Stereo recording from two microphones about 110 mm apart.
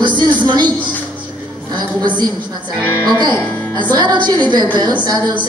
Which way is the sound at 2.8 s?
15° left (ahead or behind).